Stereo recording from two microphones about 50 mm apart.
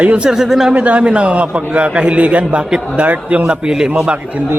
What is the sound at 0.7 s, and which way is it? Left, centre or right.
A man's voice, right.